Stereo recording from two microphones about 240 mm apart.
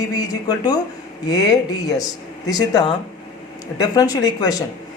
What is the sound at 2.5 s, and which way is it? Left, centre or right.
Speech, centre.